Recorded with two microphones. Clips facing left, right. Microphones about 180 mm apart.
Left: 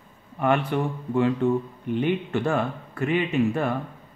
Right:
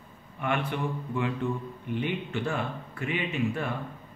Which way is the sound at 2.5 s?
45° left (ahead or behind).